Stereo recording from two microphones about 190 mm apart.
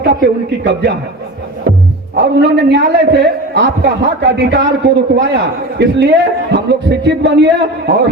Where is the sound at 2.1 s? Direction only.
60° right (ahead or behind).